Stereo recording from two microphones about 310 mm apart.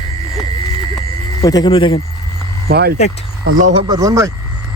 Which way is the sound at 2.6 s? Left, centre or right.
Right.